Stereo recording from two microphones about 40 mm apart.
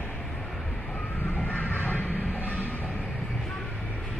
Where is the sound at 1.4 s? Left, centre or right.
Left.